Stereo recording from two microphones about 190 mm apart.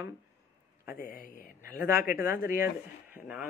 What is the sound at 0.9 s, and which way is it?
Speech, 50° left (ahead or behind).